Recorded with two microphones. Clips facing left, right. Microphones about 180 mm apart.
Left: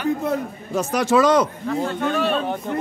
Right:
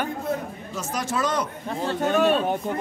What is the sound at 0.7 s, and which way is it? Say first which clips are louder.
Speech: left 10 dB; 70° left (ahead or behind).